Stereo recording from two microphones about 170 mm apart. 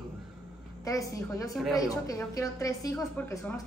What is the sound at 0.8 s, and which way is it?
A woman's voice, 20° left (ahead or behind).